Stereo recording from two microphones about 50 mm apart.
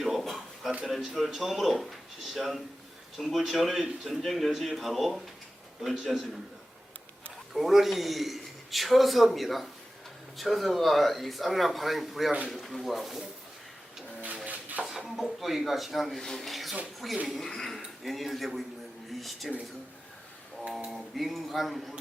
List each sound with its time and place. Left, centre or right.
0.2 s a sound: centre
0.9 s a man's voice: centre
7.5 s a man's voice: centre
14.4 s dishes: right
14.8 s a man's voice: centre
20.7 s a sound: centre
20.9 s a man's voice: centre